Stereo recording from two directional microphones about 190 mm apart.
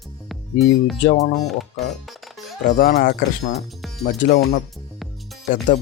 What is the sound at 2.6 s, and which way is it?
Speech, 45° left (ahead or behind).